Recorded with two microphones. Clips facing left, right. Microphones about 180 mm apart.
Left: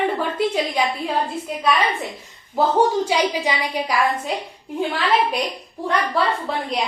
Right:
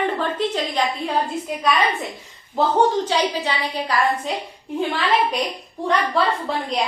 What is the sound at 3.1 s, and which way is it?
Speech, 10° left (ahead or behind).